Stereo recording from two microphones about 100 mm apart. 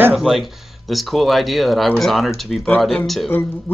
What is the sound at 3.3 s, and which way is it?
Speech, 20° left (ahead or behind).